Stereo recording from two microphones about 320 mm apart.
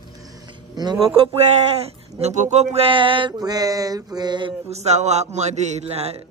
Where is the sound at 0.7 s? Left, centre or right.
Centre.